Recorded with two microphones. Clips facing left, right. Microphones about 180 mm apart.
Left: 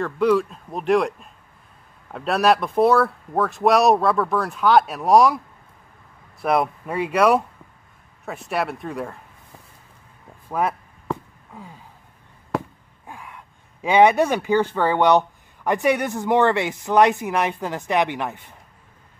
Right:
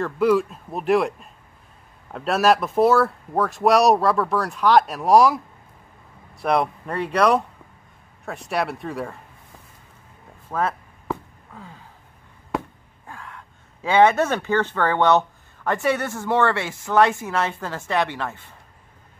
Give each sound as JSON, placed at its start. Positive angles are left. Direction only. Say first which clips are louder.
{"t": 0.0, "sound": "speech", "louder": "even", "side_deg": -5}
{"t": 6.4, "sound": "speech", "louder": "left 1 dB", "side_deg": 5}
{"t": 10.5, "sound": "speech", "louder": "left 1 dB", "side_deg": 15}
{"t": 13.0, "sound": "gasp", "louder": "even", "side_deg": 15}
{"t": 13.8, "sound": "speech", "louder": "left 1 dB", "side_deg": 15}